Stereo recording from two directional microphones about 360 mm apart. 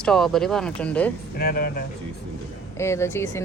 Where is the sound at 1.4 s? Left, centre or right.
Left.